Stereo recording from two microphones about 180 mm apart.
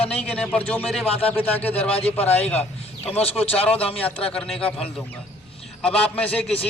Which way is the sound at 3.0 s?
35° left (ahead or behind).